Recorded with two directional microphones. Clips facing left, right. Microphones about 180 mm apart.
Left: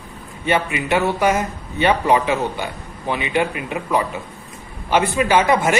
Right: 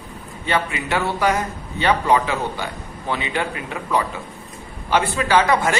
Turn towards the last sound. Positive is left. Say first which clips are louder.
# left 1 dB
turn(degrees=20)  # may be behind; listen again after turning